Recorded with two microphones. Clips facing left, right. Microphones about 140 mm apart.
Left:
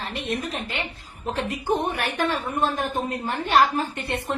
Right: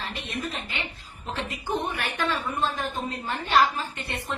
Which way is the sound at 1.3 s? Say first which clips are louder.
Left 5 dB; 55° left (ahead or behind).